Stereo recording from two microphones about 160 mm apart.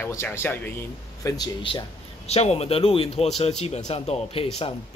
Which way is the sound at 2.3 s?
40° left (ahead or behind).